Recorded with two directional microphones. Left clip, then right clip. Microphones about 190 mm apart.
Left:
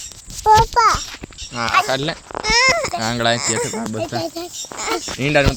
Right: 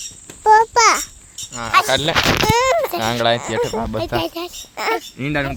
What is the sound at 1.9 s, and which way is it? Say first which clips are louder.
Speech: right 6 dB; 10° right (ahead or behind).